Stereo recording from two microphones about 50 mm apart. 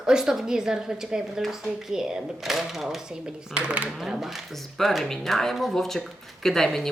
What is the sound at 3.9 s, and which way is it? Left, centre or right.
Speech, centre.